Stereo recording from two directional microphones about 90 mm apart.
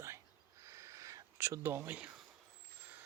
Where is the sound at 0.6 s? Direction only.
35° right (ahead or behind); by 2.1 s 20° right (ahead or behind).